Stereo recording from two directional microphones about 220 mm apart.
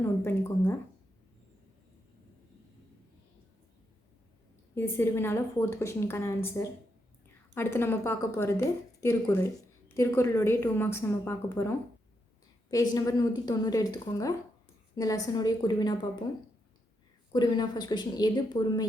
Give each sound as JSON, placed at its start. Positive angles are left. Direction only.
{"t": 0.0, "sound": "a woman's voice", "side_deg": 10}
{"t": 4.7, "sound": "a woman's voice", "side_deg": 10}
{"t": 17.3, "sound": "a woman's voice", "side_deg": 20}